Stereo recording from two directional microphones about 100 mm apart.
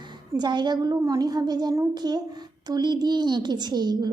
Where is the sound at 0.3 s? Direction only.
50° right (ahead or behind).